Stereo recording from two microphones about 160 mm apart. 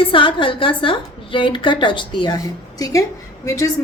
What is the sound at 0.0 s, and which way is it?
A woman's voice, 30° left (ahead or behind).